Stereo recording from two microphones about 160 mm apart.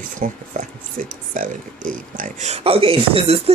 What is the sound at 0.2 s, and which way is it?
Speech, 55° right (ahead or behind).